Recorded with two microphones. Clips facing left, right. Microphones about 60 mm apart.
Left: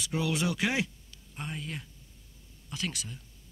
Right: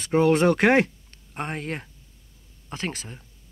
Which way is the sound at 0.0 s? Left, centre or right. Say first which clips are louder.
Right 12 dB; right.